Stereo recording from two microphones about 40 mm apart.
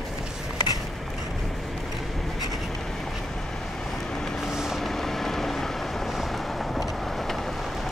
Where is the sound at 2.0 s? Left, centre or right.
Centre.